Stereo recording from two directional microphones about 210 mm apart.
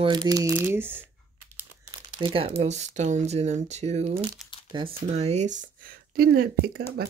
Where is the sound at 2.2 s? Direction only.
25° right (ahead or behind).